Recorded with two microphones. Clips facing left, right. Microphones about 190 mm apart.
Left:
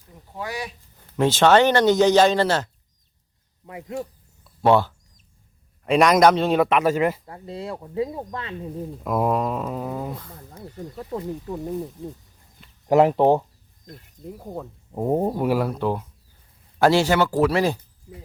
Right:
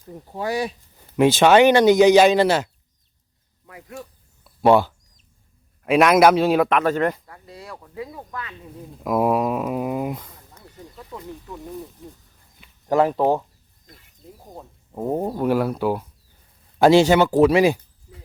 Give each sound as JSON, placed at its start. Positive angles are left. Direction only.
{"t": 0.1, "sound": "speech", "side_deg": -35}
{"t": 0.9, "sound": "speech", "side_deg": -10}
{"t": 3.7, "sound": "speech", "side_deg": 20}
{"t": 4.4, "sound": "a sound", "side_deg": -10}
{"t": 5.8, "sound": "speech", "side_deg": -5}
{"t": 7.3, "sound": "speech", "side_deg": 25}
{"t": 9.0, "sound": "speech", "side_deg": -5}
{"t": 10.5, "sound": "speech", "side_deg": 35}
{"t": 13.8, "sound": "speech", "side_deg": 45}
{"t": 14.9, "sound": "speech", "side_deg": 15}
{"t": 15.4, "sound": "speech", "side_deg": 0}
{"t": 16.7, "sound": "speech", "side_deg": -20}